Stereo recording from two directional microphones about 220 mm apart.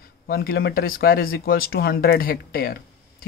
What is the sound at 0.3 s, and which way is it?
Speech, 45° left (ahead or behind).